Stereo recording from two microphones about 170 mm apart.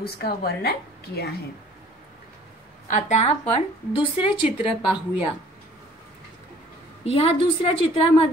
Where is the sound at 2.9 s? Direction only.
40° left (ahead or behind).